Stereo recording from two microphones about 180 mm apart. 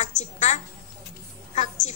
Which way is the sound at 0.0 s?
40° left (ahead or behind).